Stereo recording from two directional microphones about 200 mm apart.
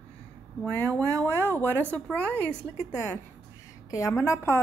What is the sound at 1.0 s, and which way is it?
Speech, 15° right (ahead or behind).